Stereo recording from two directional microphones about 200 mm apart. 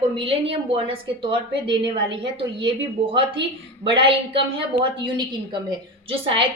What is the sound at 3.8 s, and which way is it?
Speech, 25° right (ahead or behind).